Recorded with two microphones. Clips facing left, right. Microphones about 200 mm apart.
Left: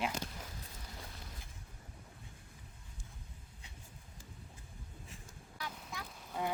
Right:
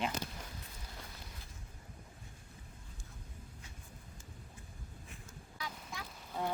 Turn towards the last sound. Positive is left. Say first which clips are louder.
# even
turn(degrees=0)  # may be behind; listen again after turning